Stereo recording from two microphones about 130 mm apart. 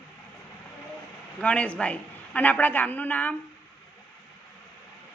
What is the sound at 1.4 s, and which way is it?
A woman's voice, 10° left (ahead or behind).